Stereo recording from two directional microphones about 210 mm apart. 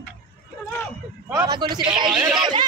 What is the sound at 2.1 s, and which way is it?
Speech, 5° right (ahead or behind).